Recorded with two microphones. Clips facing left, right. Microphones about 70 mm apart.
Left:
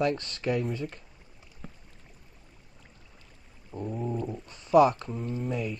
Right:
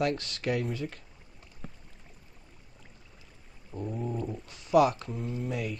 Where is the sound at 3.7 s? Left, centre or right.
Centre.